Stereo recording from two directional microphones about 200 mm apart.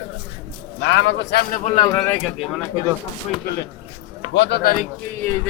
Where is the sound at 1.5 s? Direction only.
35° left (ahead or behind).